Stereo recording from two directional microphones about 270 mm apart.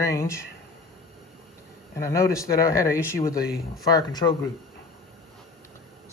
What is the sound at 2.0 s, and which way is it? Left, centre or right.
Speech, centre.